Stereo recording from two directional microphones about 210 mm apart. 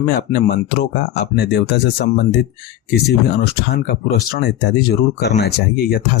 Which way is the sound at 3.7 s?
45° left (ahead or behind).